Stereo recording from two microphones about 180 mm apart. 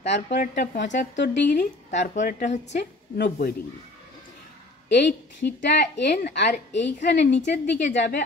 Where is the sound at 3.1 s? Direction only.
65° left (ahead or behind).